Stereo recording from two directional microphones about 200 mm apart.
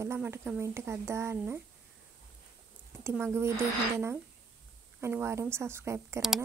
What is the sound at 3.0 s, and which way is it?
A woman's voice, 15° right (ahead or behind).